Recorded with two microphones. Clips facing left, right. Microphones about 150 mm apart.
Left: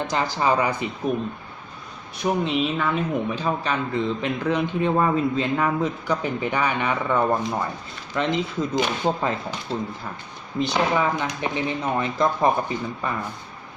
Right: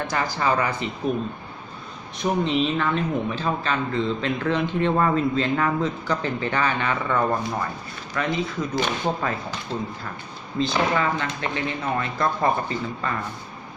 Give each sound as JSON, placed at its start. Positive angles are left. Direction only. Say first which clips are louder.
{"t": 0.1, "sound": "speech", "louder": "left 2 dB", "side_deg": 20}
{"t": 2.2, "sound": "speech", "louder": "even", "side_deg": 5}
{"t": 10.6, "sound": "speech", "louder": "left 1 dB", "side_deg": 15}